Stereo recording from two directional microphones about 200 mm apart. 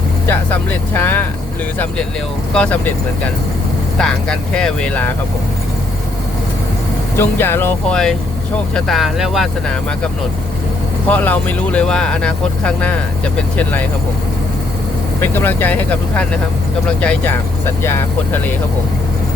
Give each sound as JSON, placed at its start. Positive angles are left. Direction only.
{"t": 0.3, "sound": "speech", "side_deg": 10}
{"t": 2.5, "sound": "speech", "side_deg": 5}
{"t": 3.9, "sound": "speech", "side_deg": 5}
{"t": 7.2, "sound": "speech", "side_deg": 10}
{"t": 11.1, "sound": "speech", "side_deg": 5}
{"t": 15.2, "sound": "speech", "side_deg": 10}